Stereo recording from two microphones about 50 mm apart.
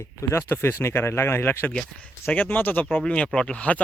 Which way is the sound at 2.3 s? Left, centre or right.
Left.